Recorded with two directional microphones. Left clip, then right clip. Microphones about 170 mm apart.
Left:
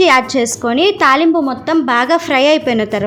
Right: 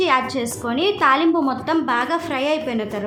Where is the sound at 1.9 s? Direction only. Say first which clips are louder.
Left 8 dB; 45° left (ahead or behind).